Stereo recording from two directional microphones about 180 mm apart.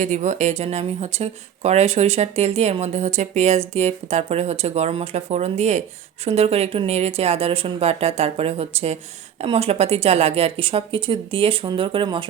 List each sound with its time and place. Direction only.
0.0 s speech: 45° right (ahead or behind); by 12.3 s 30° right (ahead or behind)